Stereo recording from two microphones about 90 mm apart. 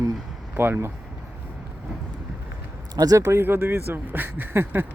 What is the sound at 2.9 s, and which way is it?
Speech, 45° right (ahead or behind).